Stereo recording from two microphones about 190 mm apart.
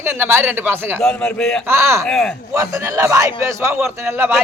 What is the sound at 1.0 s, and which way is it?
Speech, 5° left (ahead or behind).